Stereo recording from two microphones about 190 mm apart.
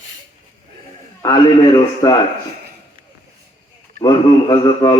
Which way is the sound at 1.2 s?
20° left (ahead or behind).